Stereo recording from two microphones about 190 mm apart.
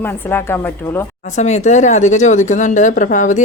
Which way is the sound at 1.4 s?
35° left (ahead or behind).